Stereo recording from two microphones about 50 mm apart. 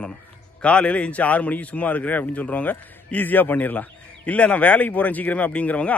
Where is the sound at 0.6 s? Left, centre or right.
Left.